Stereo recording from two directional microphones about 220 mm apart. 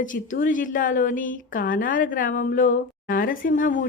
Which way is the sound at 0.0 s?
35° left (ahead or behind).